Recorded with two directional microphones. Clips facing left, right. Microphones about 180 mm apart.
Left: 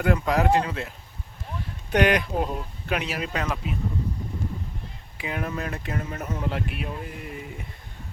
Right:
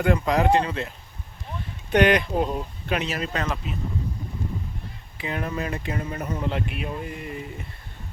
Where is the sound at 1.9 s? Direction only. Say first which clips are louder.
Right 2 dB; 10° left (ahead or behind).